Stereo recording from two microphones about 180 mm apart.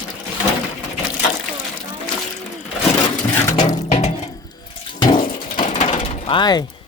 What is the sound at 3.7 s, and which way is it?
Music, 40° left (ahead or behind).